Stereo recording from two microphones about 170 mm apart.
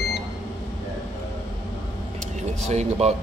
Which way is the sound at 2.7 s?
40° right (ahead or behind).